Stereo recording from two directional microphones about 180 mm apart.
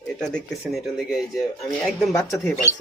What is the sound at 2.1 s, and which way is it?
Speech, 20° left (ahead or behind).